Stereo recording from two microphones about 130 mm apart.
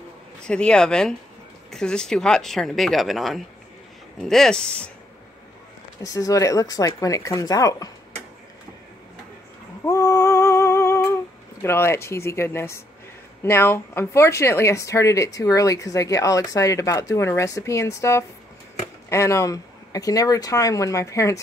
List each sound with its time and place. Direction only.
0.5 s speech: 5° left (ahead or behind)
6.0 s speech: 25° left (ahead or behind)
9.8 s a sound: 20° left (ahead or behind)
11.6 s speech: 20° left (ahead or behind)